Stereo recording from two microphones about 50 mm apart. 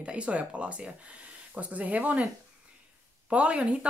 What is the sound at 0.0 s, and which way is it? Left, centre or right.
Speech, right.